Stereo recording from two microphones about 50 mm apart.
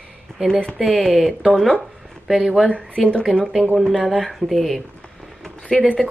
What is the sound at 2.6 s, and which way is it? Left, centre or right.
Speech, left.